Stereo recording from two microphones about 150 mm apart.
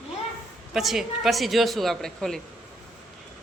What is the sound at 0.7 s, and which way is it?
Speech, centre (ahead or behind).